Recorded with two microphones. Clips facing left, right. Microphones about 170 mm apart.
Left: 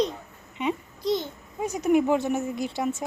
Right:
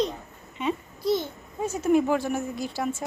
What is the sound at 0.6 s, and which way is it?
A child's voice, 15° left (ahead or behind).